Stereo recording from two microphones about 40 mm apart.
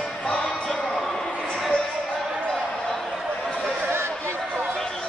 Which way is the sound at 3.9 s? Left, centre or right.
Right.